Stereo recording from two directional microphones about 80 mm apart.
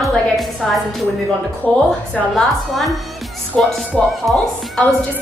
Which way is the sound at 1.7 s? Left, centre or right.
Centre.